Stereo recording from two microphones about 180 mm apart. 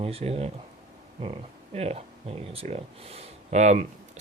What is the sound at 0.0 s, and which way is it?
Speech, 35° right (ahead or behind).